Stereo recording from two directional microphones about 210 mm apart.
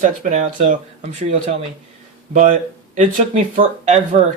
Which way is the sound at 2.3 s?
35° right (ahead or behind).